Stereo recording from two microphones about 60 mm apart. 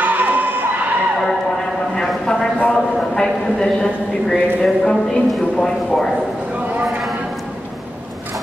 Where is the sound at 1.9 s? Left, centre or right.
Centre.